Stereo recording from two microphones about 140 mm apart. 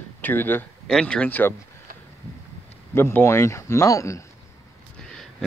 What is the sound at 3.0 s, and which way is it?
Speech, 15° left (ahead or behind).